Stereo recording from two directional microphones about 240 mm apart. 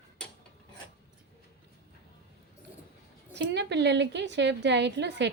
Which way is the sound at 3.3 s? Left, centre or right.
Right.